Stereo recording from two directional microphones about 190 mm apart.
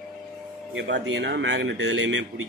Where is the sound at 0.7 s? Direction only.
65° right (ahead or behind); by 2.2 s 85° right.